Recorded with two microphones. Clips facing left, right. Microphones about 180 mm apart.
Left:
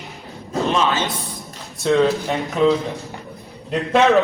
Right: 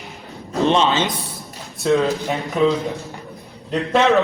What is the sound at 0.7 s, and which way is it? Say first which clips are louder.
Speech: right 2 dB; 25° right (ahead or behind).